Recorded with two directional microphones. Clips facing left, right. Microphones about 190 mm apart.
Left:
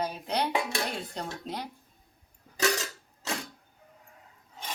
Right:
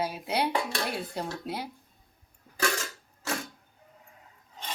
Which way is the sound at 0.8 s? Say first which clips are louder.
Right 2 dB; 5° right (ahead or behind).